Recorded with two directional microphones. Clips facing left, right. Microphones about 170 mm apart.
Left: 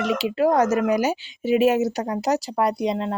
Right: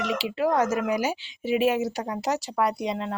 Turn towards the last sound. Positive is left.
turn(degrees=35)  # may be behind; listen again after turning